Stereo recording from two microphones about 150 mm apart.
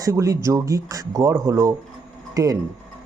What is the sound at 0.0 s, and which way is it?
Speech, 20° right (ahead or behind).